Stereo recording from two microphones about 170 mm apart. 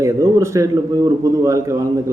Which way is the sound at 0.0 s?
15° right (ahead or behind).